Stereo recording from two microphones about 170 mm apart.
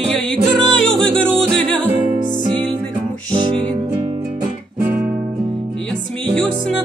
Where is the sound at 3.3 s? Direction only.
30° right (ahead or behind).